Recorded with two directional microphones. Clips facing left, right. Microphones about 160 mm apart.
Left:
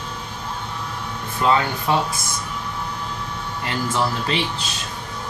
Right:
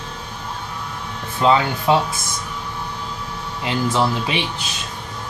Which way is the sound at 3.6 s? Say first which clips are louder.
Right 4 dB; 20° right (ahead or behind).